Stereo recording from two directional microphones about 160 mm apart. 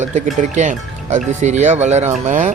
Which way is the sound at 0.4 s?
50° right (ahead or behind).